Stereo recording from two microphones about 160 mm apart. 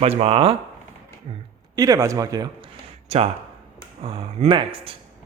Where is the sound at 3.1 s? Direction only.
40° right (ahead or behind).